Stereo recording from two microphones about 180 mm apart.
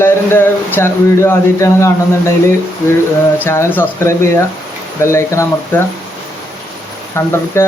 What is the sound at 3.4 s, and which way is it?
Speech, 15° left (ahead or behind).